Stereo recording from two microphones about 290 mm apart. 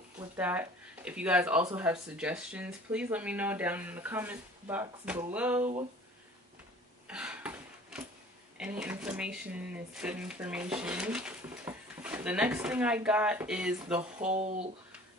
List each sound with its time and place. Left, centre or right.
0.2 s speech: centre
7.1 s a sound: centre
8.5 s speech: centre
14.3 s speech: right